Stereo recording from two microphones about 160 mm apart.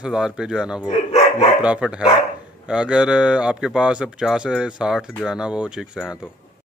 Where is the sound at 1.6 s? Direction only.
5° right (ahead or behind).